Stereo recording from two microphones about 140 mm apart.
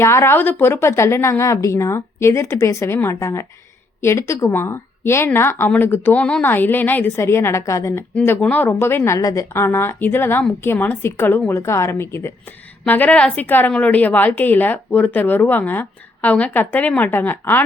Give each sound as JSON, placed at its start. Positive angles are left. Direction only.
{"t": 0.0, "sound": "a woman's voice", "side_deg": 20}